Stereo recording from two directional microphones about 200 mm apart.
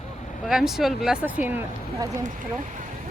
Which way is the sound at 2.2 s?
40° right (ahead or behind).